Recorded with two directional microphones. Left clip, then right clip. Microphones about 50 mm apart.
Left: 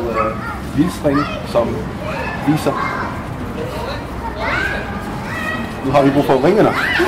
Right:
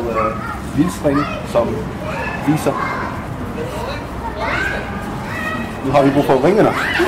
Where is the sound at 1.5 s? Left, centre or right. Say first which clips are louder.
Even; centre.